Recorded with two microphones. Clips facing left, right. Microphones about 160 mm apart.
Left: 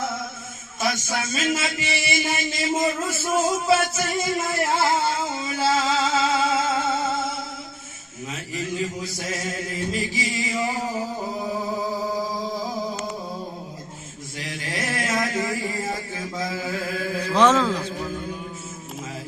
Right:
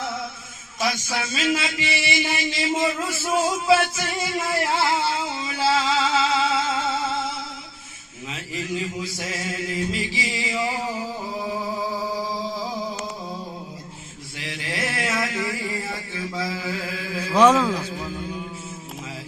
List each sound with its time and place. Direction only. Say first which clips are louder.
0.8 s a man's voice: even; 45° left (ahead or behind)
3.9 s music: left 2 dB; 45° left (ahead or behind)
8.3 s mantra: even; 40° left (ahead or behind)
14.3 s a sound: even; 40° left (ahead or behind)
17.3 s speech: right 2 dB; 10° right (ahead or behind)